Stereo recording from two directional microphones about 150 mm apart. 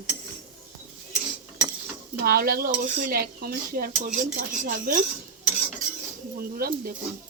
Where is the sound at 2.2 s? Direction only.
85° right.